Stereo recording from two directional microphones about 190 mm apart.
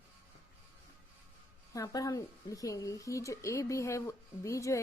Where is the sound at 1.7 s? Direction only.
20° left (ahead or behind).